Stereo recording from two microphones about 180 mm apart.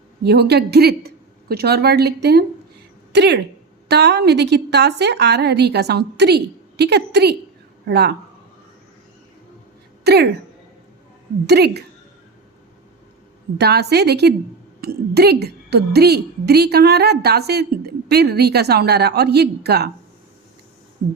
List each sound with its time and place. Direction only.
0.3 s a woman's voice: 65° right (ahead or behind)
10.0 s speech: 65° right (ahead or behind)
11.4 s a woman's voice: 65° right (ahead or behind)
13.6 s a woman's voice: 65° right (ahead or behind)